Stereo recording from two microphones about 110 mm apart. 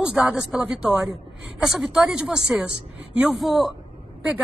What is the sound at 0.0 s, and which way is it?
A woman's voice, 5° right (ahead or behind).